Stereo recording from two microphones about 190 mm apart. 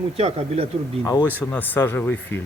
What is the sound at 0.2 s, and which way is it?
Speech, 30° right (ahead or behind).